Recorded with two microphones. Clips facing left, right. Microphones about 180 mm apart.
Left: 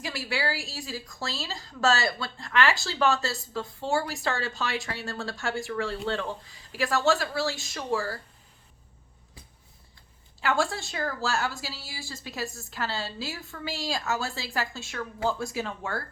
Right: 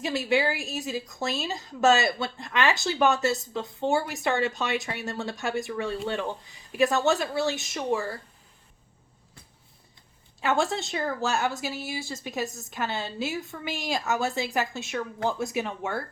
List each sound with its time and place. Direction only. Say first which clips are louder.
0.0 s a woman's voice: right 6 dB; 20° right (ahead or behind)
10.4 s a woman's voice: right 2 dB; 20° right (ahead or behind)